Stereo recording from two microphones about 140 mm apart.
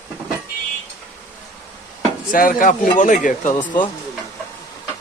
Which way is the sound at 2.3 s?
75° left (ahead or behind).